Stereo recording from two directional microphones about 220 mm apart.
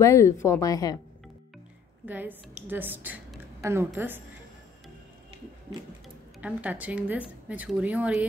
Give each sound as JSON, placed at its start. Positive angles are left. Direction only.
{"t": 0.0, "sound": "speech", "side_deg": 15}
{"t": 2.0, "sound": "a woman's voice", "side_deg": -5}
{"t": 6.4, "sound": "a woman's voice", "side_deg": -5}